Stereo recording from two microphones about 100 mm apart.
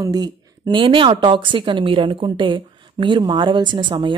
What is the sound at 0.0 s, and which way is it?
Speech, 40° right (ahead or behind).